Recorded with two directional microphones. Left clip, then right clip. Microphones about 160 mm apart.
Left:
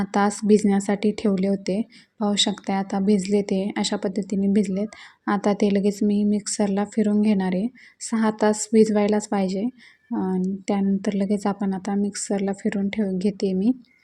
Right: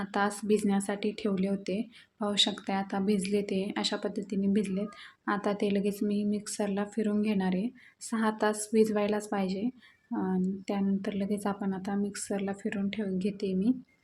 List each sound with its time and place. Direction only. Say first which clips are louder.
0.0 s speech: left 8 dB; 35° left (ahead or behind)